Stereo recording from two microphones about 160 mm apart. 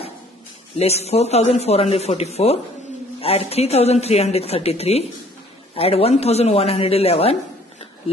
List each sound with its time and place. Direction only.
0.7 s a man's voice: 40° left (ahead or behind)